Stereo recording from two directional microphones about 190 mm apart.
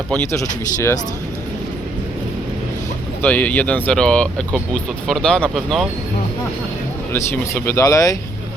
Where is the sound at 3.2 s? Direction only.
10° left (ahead or behind).